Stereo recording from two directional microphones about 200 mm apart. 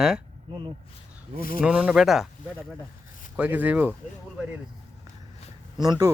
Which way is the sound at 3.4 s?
10° right (ahead or behind).